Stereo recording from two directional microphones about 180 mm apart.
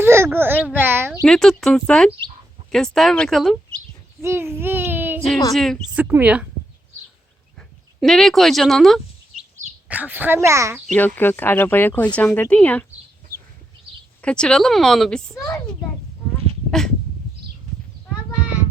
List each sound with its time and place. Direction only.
0.0 s a sound: 15° right (ahead or behind)
1.2 s speech: 5° left (ahead or behind)
4.2 s a child's voice: 15° right (ahead or behind)
5.5 s speech: centre (ahead or behind)
6.1 s speech: 10° right (ahead or behind)
8.0 s a woman's voice: centre (ahead or behind); by 10.8 s 15° right (ahead or behind)
10.8 s speech: 10° left (ahead or behind)
14.2 s speech: 5° left (ahead or behind)
15.4 s speech: 15° left (ahead or behind)